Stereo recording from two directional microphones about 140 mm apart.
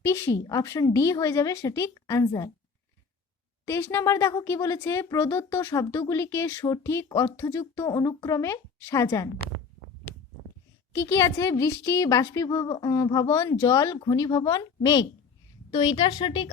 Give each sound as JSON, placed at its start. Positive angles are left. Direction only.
{"t": 0.0, "sound": "speech", "side_deg": 20}
{"t": 3.7, "sound": "speech", "side_deg": 20}
{"t": 10.9, "sound": "a woman's voice", "side_deg": 20}